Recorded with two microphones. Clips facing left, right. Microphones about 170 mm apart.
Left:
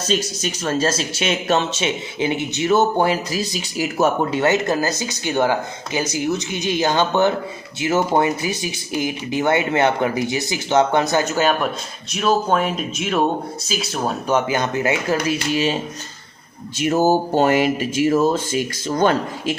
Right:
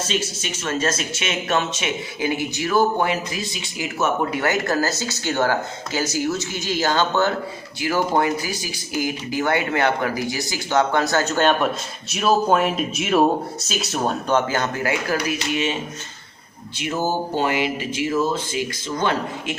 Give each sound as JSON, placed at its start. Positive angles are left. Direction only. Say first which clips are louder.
{"t": 0.1, "sound": "speech", "louder": "left 4 dB", "side_deg": 40}